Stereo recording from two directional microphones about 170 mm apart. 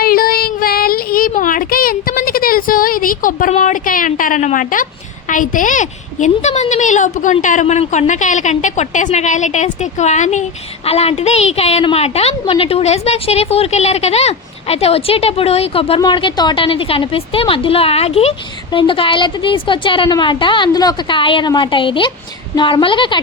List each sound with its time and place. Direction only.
0.0 s child singing: 60° left (ahead or behind)
5.3 s a woman's voice: 50° left (ahead or behind); by 23.2 s 30° left (ahead or behind)